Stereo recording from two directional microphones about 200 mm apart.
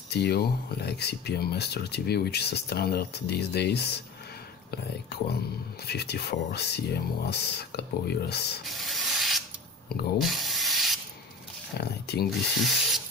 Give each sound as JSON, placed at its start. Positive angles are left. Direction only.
{"t": 0.1, "sound": "speech", "side_deg": 55}
{"t": 5.9, "sound": "speech", "side_deg": 55}
{"t": 8.6, "sound": "sanding", "side_deg": 0}
{"t": 11.8, "sound": "speech", "side_deg": 50}
{"t": 12.5, "sound": "speech", "side_deg": 0}